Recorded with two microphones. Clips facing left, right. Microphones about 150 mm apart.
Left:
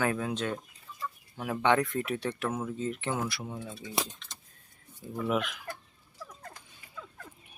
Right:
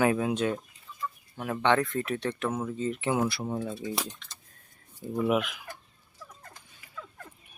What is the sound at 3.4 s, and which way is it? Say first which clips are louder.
Speech: right 8 dB; 55° right (ahead or behind).